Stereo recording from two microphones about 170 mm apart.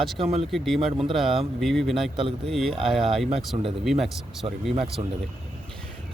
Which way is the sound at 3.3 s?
35° right (ahead or behind).